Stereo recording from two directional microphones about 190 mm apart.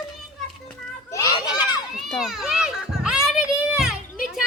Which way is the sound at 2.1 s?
Centre (ahead or behind).